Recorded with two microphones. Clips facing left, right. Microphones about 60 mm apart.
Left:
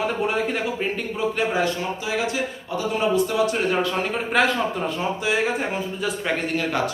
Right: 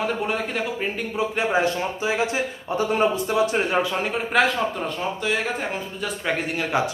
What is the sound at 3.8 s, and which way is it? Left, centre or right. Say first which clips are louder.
A man's voice: even; centre.